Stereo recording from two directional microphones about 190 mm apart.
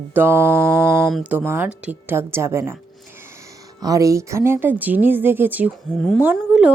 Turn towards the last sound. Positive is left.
turn(degrees=-5)  # may be behind; listen again after turning